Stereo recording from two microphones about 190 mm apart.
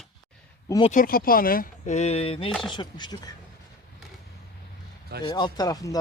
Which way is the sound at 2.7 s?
20° left (ahead or behind).